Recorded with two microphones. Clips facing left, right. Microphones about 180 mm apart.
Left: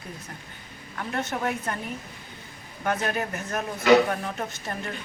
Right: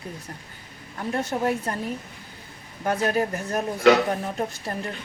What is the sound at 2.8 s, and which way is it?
Speech, 30° right (ahead or behind).